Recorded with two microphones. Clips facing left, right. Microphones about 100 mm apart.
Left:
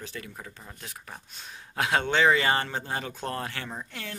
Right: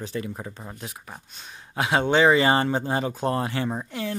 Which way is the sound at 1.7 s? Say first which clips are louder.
Right 4 dB; 10° right (ahead or behind).